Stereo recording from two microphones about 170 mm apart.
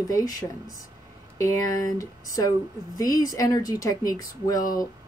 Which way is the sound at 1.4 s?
20° left (ahead or behind).